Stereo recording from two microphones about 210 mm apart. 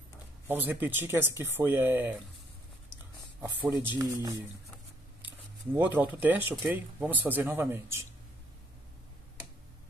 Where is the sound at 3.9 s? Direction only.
15° right (ahead or behind).